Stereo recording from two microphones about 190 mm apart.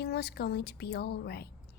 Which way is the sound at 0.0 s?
60° left (ahead or behind).